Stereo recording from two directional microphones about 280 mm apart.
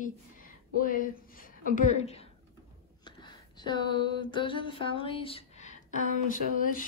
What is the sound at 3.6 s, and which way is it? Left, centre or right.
A woman's voice, centre.